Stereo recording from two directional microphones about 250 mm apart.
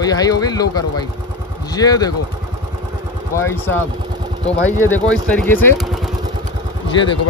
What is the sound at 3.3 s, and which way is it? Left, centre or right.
Speech, centre.